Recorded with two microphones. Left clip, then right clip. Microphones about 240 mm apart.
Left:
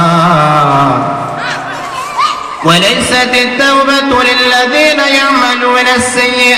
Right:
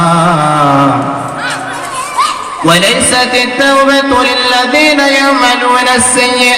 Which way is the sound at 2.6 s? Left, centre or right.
Left.